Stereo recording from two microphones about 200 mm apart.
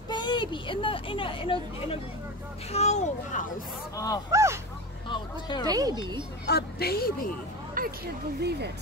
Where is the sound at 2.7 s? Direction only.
35° left (ahead or behind).